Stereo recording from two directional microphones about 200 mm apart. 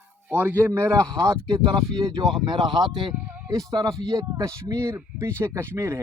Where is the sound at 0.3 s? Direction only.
10° right (ahead or behind).